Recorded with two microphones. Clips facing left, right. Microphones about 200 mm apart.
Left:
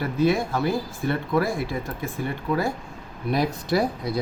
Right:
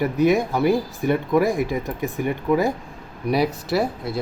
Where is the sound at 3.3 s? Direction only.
5° right (ahead or behind).